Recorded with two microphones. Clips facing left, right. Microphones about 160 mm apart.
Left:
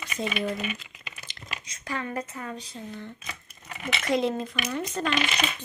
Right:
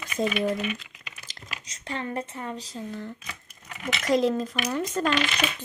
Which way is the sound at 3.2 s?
10° left (ahead or behind).